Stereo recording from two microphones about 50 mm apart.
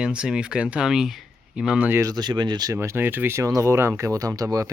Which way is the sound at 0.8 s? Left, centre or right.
Centre.